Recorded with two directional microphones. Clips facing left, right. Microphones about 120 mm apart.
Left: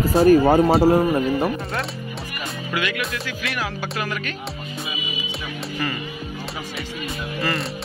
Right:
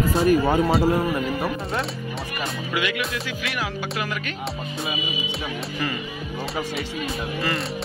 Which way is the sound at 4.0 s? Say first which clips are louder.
Left 1 dB; 15° right (ahead or behind).